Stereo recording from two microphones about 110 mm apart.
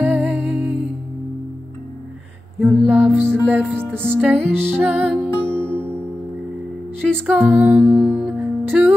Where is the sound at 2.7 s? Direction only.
20° right (ahead or behind).